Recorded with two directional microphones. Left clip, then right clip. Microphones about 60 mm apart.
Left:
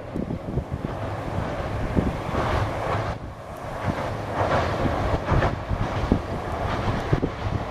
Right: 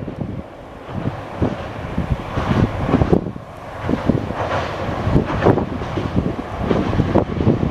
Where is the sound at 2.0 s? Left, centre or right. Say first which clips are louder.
Even; centre.